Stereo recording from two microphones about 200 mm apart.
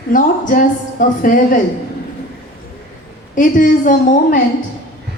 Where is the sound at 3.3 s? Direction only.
40° left (ahead or behind).